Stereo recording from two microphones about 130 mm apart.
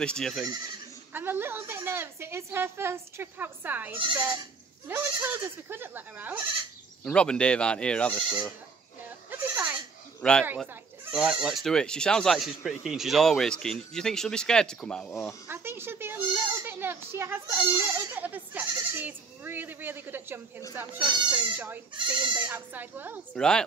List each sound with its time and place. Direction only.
0.0 s speech: 5° left (ahead or behind)
1.1 s a woman's voice: 15° right (ahead or behind)
7.1 s speech: 10° left (ahead or behind)
8.1 s speech: 5° right (ahead or behind)
9.3 s goat: 15° right (ahead or behind)
10.2 s speech: 5° left (ahead or behind)
10.7 s speech: 10° right (ahead or behind)
15.4 s a child's voice: 15° right (ahead or behind)
21.9 s speech: 35° right (ahead or behind)
22.4 s a woman's voice: 15° right (ahead or behind)
23.3 s speech: 5° left (ahead or behind)